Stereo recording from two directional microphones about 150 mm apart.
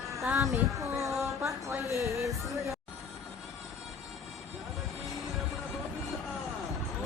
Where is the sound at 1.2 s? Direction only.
20° right (ahead or behind).